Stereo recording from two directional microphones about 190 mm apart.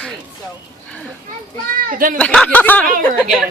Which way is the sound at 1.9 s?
45° right (ahead or behind).